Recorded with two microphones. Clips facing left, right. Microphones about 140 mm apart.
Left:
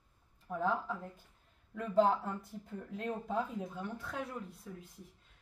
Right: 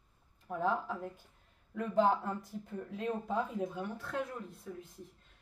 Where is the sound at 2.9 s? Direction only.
Centre (ahead or behind).